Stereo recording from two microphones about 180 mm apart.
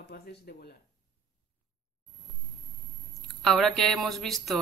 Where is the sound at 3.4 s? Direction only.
Centre (ahead or behind).